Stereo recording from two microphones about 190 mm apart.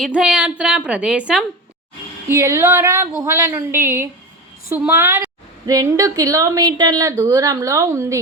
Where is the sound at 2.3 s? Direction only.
15° right (ahead or behind).